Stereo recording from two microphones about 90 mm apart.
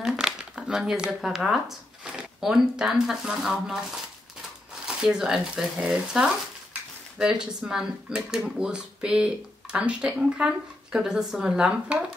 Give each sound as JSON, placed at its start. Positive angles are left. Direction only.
{"t": 0.0, "sound": "speech", "side_deg": -10}